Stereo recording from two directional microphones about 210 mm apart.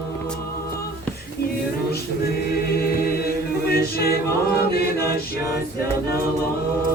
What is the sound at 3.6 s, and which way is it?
A capella, 45° left (ahead or behind).